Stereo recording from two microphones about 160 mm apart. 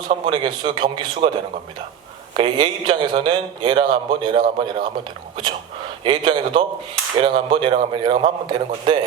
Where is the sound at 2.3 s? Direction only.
30° right (ahead or behind).